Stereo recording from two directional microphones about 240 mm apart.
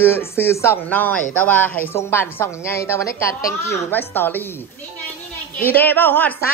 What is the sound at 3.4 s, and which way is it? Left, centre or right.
Speech, left.